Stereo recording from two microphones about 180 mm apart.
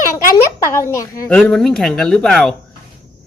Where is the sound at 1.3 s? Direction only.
5° left (ahead or behind).